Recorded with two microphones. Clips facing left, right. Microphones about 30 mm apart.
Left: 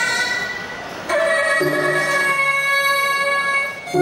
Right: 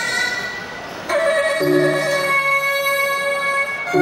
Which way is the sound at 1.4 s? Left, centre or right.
Centre.